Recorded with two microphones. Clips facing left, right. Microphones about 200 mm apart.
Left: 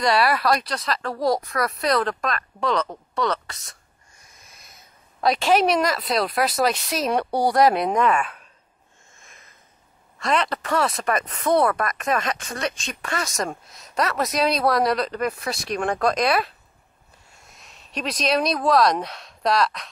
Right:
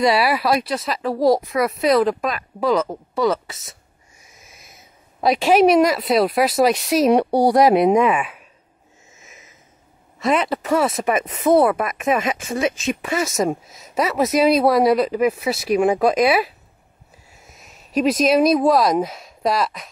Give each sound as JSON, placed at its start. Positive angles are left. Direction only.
{"t": 0.0, "sound": "speech", "side_deg": -5}
{"t": 9.1, "sound": "sniff", "side_deg": -5}
{"t": 10.1, "sound": "speech", "side_deg": -5}